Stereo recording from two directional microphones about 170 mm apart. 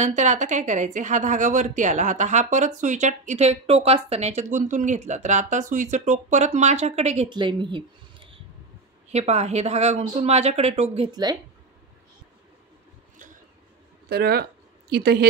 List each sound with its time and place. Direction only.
0.0 s a woman's voice: 45° right (ahead or behind)
7.2 s speech: 25° right (ahead or behind)
11.1 s speech: 25° right (ahead or behind)
14.0 s speech: 70° right (ahead or behind)